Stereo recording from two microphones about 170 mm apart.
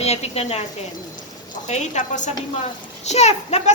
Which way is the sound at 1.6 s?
45° left (ahead or behind).